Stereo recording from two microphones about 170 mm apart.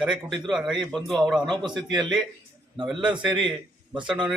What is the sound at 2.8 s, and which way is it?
Speech, 5° right (ahead or behind).